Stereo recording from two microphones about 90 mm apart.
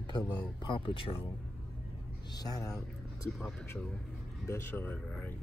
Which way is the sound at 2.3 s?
45° left (ahead or behind).